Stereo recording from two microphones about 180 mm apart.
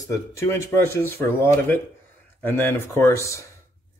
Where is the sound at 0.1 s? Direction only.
15° left (ahead or behind).